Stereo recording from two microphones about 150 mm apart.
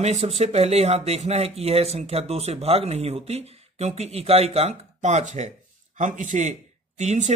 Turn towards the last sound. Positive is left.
turn(degrees=-50)  # may be behind; listen again after turning